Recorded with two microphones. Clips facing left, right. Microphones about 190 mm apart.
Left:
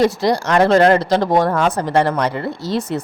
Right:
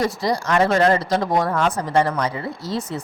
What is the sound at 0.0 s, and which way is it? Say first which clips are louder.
Speech: left 6 dB; 80° left.